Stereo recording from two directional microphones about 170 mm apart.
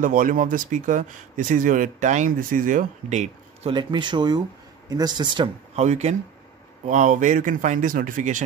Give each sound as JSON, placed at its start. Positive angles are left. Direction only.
{"t": 0.0, "sound": "speech", "side_deg": -50}
{"t": 3.7, "sound": "speech", "side_deg": -25}
{"t": 5.8, "sound": "speech", "side_deg": -40}